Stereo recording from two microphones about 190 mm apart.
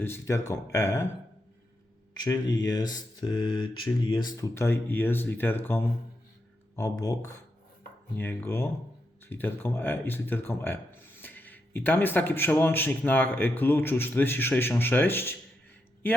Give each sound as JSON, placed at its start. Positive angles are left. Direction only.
{"t": 0.0, "sound": "speech", "side_deg": 15}
{"t": 2.9, "sound": "speech", "side_deg": 20}